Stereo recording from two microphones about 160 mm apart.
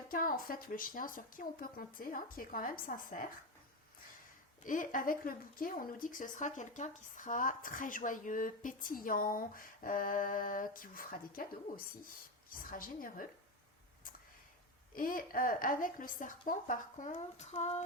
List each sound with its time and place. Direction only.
0.1 s speech: 60° left (ahead or behind)
4.6 s speech: 55° left (ahead or behind)
12.5 s speech: 60° left (ahead or behind)
14.9 s speech: 60° left (ahead or behind); by 17.8 s 45° left (ahead or behind)